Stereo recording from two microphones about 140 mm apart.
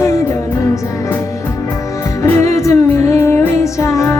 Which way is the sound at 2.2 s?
20° left (ahead or behind).